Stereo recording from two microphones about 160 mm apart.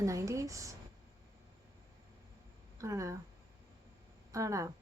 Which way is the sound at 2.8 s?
20° right (ahead or behind).